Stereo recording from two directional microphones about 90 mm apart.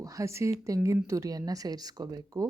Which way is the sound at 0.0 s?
35° right (ahead or behind).